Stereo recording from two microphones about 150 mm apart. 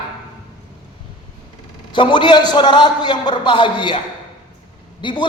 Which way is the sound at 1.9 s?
30° left (ahead or behind).